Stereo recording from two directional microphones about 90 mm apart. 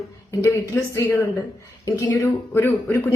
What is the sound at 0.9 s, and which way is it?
A woman's voice, 30° left (ahead or behind).